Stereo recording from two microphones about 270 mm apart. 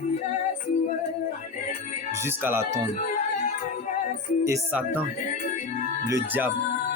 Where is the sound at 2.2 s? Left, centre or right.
Centre.